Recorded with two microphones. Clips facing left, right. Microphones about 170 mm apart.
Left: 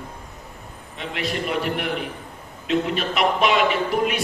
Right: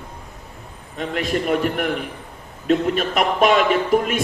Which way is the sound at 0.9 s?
45° right (ahead or behind).